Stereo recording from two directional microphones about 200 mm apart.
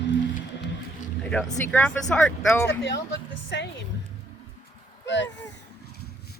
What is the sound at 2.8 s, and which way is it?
Speech, 60° left (ahead or behind).